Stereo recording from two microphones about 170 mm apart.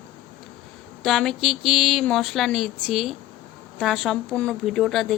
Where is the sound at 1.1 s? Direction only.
Centre (ahead or behind).